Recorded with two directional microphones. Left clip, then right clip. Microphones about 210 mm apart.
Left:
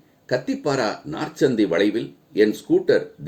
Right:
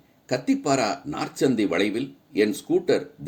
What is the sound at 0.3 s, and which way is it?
Speech, 35° right (ahead or behind).